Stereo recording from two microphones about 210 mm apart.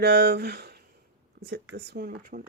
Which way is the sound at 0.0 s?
50° right (ahead or behind).